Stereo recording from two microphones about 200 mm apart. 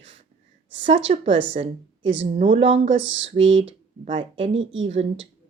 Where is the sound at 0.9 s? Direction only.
25° right (ahead or behind).